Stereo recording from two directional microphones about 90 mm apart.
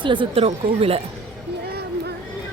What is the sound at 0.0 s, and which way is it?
A woman's voice, 65° right (ahead or behind).